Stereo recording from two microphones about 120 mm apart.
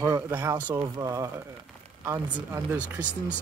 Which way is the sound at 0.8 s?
30° right (ahead or behind).